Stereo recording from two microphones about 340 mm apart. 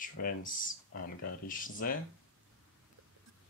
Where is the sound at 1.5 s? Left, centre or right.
Left.